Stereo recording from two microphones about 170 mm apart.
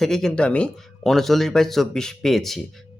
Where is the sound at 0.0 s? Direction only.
Centre (ahead or behind).